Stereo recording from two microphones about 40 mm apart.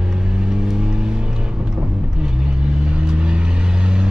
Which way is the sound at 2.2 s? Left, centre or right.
Right.